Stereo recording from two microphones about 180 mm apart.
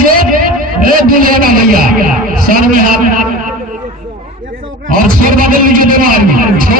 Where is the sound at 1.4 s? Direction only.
55° right (ahead or behind).